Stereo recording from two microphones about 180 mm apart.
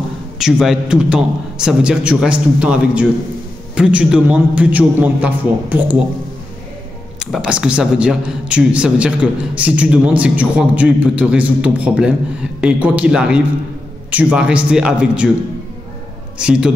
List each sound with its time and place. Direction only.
0.4 s a man's voice: centre (ahead or behind)
7.2 s a man's voice: centre (ahead or behind)
16.3 s a man's voice: 5° right (ahead or behind)